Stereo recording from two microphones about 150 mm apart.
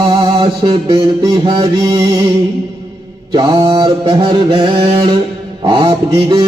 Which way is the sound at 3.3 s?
30° right (ahead or behind).